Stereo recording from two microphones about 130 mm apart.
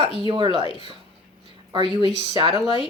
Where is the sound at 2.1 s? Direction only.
40° right (ahead or behind).